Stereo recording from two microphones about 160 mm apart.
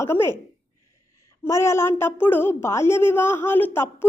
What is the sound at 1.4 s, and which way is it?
A woman's voice, 15° left (ahead or behind).